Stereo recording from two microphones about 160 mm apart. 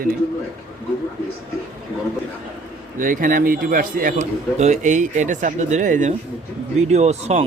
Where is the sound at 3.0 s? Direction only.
55° right (ahead or behind).